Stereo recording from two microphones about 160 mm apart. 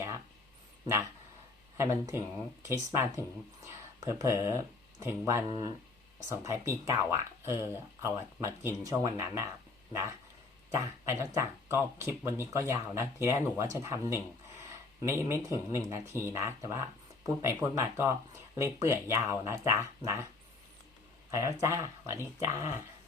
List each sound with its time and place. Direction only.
1.8 s speech: 20° right (ahead or behind)
10.8 s speech: 15° right (ahead or behind)
21.2 s speech: 20° right (ahead or behind)